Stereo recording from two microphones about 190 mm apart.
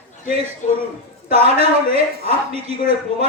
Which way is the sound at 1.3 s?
35° right (ahead or behind).